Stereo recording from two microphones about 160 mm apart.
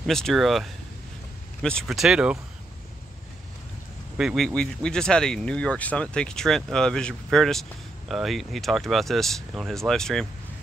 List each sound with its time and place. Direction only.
0.0 s speech: centre (ahead or behind)
4.2 s speech: centre (ahead or behind)